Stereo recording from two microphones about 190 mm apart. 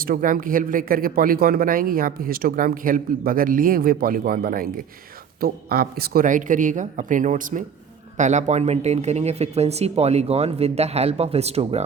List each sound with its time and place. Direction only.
0.0 s speech: 45° right (ahead or behind)